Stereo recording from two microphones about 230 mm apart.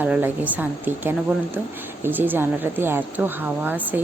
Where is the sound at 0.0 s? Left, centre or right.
Centre.